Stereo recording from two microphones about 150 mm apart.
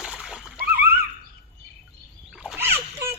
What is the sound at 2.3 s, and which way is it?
Splash, 5° right (ahead or behind).